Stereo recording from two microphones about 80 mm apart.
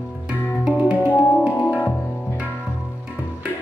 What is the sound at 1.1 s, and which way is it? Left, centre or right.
Music, left.